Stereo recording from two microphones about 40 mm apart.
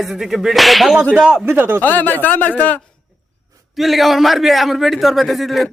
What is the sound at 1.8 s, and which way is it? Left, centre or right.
Speech, left.